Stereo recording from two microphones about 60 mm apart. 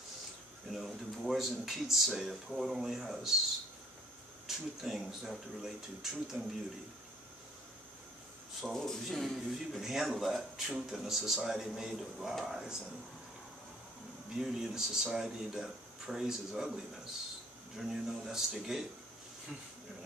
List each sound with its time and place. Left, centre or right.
0.7 s speech: centre
4.5 s speech: centre
6.3 s speech: centre
8.5 s speech: centre
9.5 s speech: centre
14.4 s speech: centre